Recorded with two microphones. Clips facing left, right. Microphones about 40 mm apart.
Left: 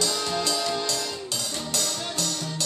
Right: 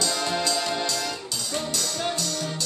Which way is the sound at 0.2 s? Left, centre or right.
Centre.